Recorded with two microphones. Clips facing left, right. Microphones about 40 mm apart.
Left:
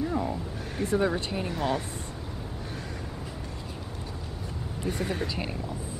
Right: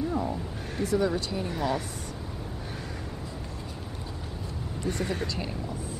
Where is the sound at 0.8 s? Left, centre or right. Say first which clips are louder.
Even; left.